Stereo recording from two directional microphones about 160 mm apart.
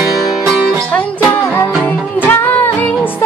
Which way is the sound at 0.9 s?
10° left (ahead or behind).